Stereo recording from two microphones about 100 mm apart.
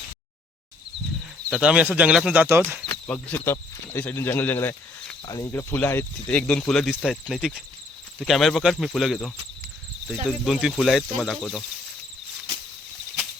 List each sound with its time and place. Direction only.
1.5 s speech: 10° right (ahead or behind)
2.3 s speech: 20° right (ahead or behind)
2.9 s speech: 15° left (ahead or behind)
5.2 s speech: 35° left (ahead or behind)
5.5 s speech: 20° left (ahead or behind)
6.3 s speech: 10° left (ahead or behind)
10.2 s speech: 5° right (ahead or behind)